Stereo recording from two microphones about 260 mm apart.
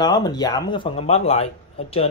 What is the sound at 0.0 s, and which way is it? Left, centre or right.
Speech, centre.